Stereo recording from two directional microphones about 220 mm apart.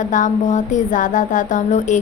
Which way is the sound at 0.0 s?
35° left (ahead or behind).